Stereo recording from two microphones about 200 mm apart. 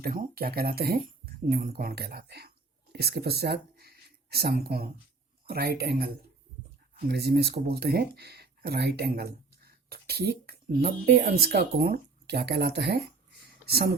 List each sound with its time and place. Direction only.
0.0 s speech: 45° right (ahead or behind)
7.1 s speech: 55° right (ahead or behind)